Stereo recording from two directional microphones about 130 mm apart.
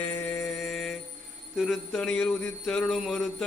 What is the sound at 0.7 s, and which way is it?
Jingle bell, centre (ahead or behind).